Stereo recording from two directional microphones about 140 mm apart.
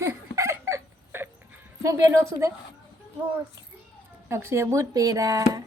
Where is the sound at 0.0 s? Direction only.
20° right (ahead or behind).